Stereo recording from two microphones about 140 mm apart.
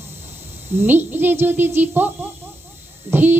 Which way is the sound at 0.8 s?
15° right (ahead or behind).